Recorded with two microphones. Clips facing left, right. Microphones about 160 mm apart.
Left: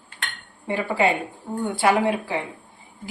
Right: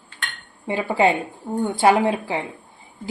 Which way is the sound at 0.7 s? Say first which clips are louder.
Right 3 dB; 20° right (ahead or behind).